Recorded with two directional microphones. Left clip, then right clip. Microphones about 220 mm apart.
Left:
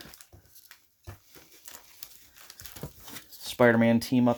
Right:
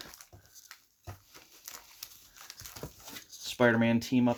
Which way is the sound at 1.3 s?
5° left (ahead or behind).